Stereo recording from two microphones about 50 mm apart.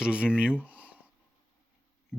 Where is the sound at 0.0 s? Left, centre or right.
Right.